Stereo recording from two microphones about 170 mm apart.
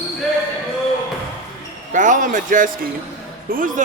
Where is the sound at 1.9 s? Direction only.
50° right (ahead or behind).